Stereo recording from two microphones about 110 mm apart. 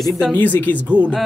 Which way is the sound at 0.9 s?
15° right (ahead or behind).